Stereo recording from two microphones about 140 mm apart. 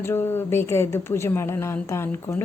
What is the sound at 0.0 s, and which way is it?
Speech, 15° left (ahead or behind).